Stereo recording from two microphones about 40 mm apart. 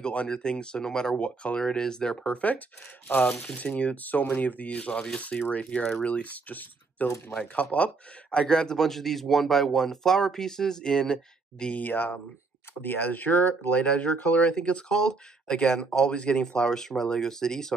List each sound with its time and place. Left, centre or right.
0.0 s speech: left
1.1 s speech: left
1.6 s speech: centre
2.2 s speech: left
8.7 s speech: centre
11.7 s speech: left
13.7 s speech: left